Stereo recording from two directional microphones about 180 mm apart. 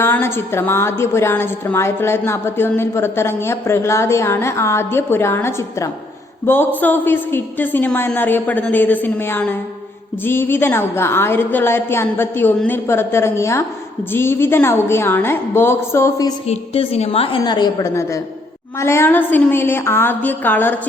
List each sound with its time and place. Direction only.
0.0 s a woman's voice: 15° left (ahead or behind)
16.5 s a woman's voice: 35° left (ahead or behind); by 20.7 s 10° left (ahead or behind)